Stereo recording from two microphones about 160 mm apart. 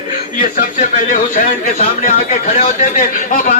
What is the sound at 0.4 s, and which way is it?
A man's voice, 55° left (ahead or behind).